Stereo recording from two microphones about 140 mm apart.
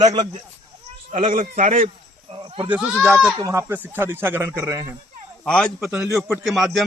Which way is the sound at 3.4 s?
20° right (ahead or behind).